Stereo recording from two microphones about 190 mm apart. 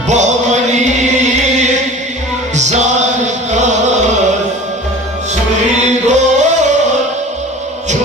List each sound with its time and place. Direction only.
0.1 s music: 40° right (ahead or behind)
6.1 s music: 40° right (ahead or behind)